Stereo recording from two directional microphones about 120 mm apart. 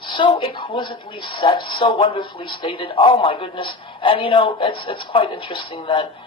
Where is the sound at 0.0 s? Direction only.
45° left (ahead or behind).